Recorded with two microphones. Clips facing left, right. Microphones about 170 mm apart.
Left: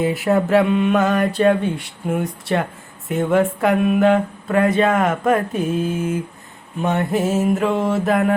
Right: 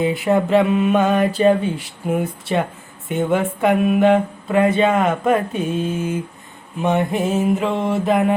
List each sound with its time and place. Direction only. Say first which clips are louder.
0.1 s speech: even; centre (ahead or behind)